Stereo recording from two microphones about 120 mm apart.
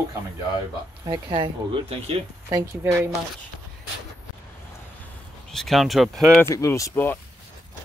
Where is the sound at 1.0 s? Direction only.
35° right (ahead or behind).